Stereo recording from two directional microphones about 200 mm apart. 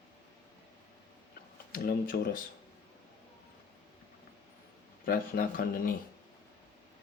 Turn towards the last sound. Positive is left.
turn(degrees=45)  # may be behind; listen again after turning